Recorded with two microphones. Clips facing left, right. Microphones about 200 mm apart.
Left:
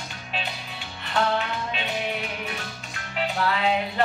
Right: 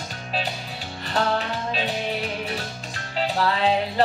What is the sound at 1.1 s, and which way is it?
Music, 35° right (ahead or behind).